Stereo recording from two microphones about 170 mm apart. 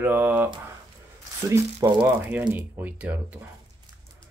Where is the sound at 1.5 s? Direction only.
20° right (ahead or behind).